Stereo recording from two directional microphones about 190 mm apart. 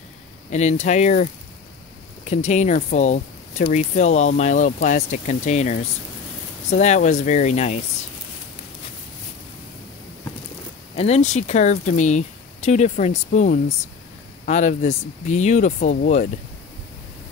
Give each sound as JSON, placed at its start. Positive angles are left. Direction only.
{"t": 0.5, "sound": "speech", "side_deg": 35}
{"t": 11.0, "sound": "speech", "side_deg": 35}